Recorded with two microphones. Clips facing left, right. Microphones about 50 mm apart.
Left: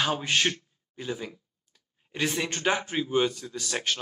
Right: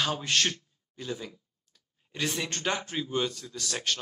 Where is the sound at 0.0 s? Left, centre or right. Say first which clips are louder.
Left 2 dB; centre.